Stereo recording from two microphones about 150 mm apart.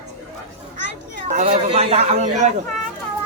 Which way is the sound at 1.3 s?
50° right (ahead or behind).